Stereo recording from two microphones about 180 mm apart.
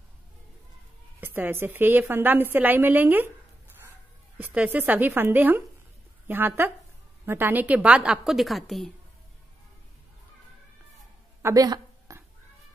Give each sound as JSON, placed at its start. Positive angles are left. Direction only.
{"t": 1.2, "sound": "a woman's voice", "side_deg": -10}
{"t": 4.4, "sound": "a woman's voice", "side_deg": -10}
{"t": 11.4, "sound": "a sound", "side_deg": -20}